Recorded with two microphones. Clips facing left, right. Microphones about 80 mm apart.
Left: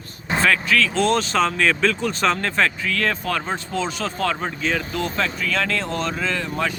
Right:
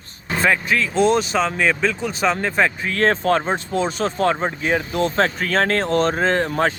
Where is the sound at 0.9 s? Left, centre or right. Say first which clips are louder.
Right 2 dB; centre.